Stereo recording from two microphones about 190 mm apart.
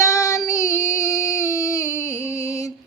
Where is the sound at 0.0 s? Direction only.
15° left (ahead or behind).